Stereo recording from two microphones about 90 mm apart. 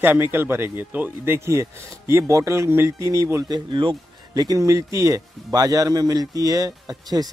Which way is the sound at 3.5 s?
65° right (ahead or behind).